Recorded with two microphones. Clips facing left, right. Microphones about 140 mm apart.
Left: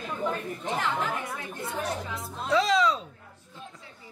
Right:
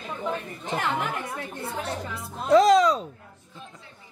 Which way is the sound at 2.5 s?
45° right (ahead or behind).